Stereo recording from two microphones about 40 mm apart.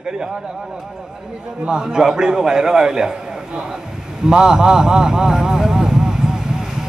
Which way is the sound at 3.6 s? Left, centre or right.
Centre.